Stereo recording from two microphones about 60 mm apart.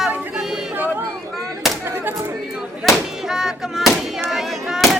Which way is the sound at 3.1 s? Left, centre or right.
Centre.